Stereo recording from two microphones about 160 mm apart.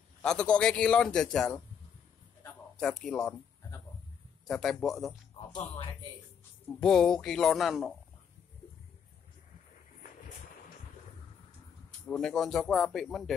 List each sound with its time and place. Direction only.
0.2 s a man's voice: 5° left (ahead or behind)
2.8 s a man's voice: 5° left (ahead or behind)
4.5 s a man's voice: 5° left (ahead or behind)
5.5 s speech: 30° left (ahead or behind)
6.8 s a man's voice: 5° left (ahead or behind)
12.1 s a man's voice: 5° left (ahead or behind)